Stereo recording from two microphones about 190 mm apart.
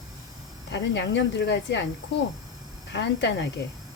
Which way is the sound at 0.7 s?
65° left (ahead or behind).